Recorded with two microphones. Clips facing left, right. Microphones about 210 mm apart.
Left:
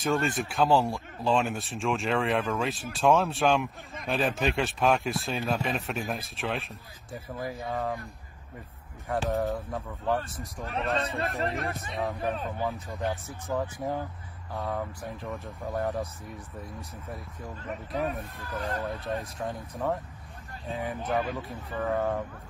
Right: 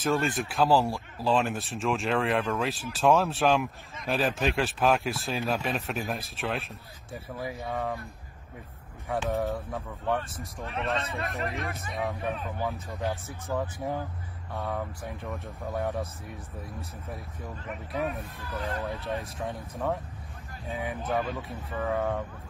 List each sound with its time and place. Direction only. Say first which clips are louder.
0.0 s speech: even; centre (ahead or behind)
9.3 s speech: left 1 dB; centre (ahead or behind)
10.6 s a man's voice: left 2 dB; 30° left (ahead or behind)
12.0 s speech: left 1 dB; centre (ahead or behind)
18.4 s speech: even; 45° left (ahead or behind)
19.0 s speech: even; centre (ahead or behind)